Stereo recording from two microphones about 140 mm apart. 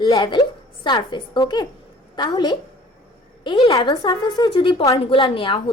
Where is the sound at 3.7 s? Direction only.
30° left (ahead or behind).